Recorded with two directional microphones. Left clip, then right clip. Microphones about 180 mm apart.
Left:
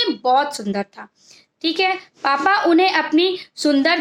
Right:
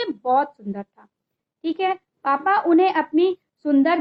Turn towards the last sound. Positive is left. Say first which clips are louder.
# left 2 dB
turn(degrees=20)  # may be behind; listen again after turning